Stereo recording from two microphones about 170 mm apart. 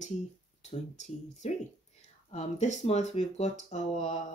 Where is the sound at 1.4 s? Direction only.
40° left (ahead or behind).